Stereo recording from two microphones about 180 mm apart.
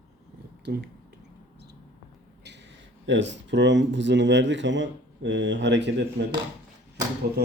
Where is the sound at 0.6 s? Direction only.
70° right (ahead or behind).